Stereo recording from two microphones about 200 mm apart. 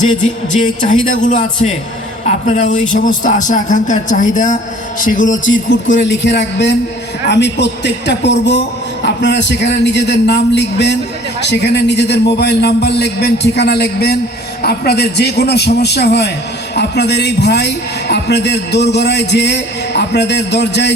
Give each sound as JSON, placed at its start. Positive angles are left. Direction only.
{"t": 0.5, "sound": "a man's voice", "side_deg": 40}
{"t": 5.5, "sound": "a man's voice", "side_deg": 65}